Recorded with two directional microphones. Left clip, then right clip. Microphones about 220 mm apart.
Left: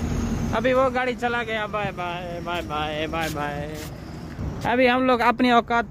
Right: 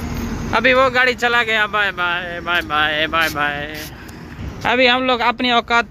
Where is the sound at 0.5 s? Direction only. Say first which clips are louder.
Right 7 dB; 5° right (ahead or behind).